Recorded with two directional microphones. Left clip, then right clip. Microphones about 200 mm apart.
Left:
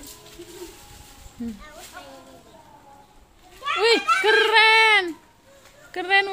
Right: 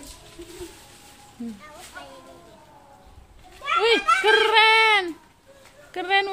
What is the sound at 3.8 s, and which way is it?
Speech, 5° left (ahead or behind).